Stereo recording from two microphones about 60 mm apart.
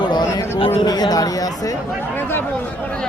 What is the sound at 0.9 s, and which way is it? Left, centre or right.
Speech, left.